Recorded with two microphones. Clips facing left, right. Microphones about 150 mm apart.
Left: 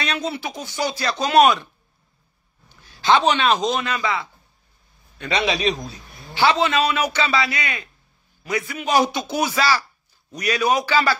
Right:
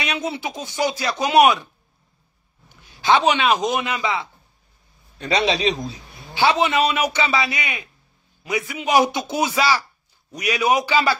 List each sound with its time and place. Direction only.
0.0 s a man's voice: 15° right (ahead or behind)
2.7 s speech: 15° right (ahead or behind)
5.2 s a man's voice: 35° right (ahead or behind)
5.9 s a man's voice: 15° right (ahead or behind)